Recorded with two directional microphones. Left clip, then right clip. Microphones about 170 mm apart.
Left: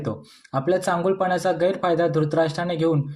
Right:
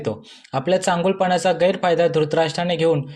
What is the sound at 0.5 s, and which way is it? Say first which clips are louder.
Speech: right 3 dB; 20° right (ahead or behind).